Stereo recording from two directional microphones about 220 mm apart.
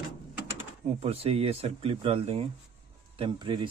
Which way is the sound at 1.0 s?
25° right (ahead or behind).